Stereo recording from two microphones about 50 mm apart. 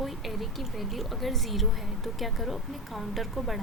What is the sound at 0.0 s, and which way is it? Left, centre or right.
A woman's voice, centre.